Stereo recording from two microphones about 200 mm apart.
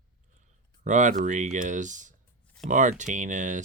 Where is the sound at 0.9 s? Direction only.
40° right (ahead or behind).